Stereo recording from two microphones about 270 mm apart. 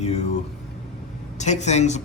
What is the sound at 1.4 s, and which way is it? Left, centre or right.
Speech, left.